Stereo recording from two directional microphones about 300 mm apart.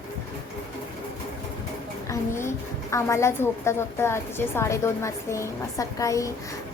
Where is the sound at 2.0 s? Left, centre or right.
Centre.